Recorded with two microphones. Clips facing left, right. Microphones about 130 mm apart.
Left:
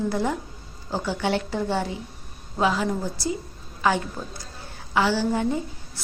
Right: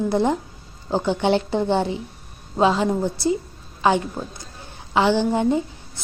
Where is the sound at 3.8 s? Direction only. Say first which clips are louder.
Right 4 dB; 20° right (ahead or behind).